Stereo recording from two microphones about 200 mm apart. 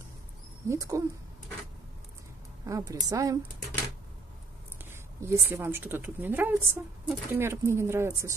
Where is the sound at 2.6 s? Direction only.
15° right (ahead or behind).